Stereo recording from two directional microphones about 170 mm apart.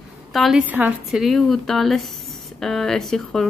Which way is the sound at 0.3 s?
Centre (ahead or behind).